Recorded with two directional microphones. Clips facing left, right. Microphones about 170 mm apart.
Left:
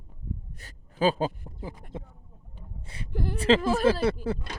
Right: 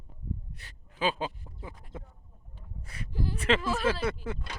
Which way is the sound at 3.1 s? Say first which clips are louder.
Left 2 dB; 60° left (ahead or behind).